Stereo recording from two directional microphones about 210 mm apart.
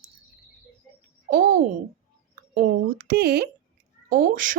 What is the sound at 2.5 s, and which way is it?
A woman's voice, 40° right (ahead or behind).